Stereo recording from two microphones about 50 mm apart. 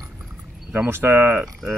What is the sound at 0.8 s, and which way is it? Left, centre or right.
Speech, right.